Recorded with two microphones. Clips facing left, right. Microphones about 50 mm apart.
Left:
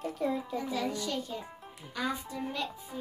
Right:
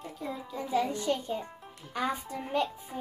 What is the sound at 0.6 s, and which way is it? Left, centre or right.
Speech, right.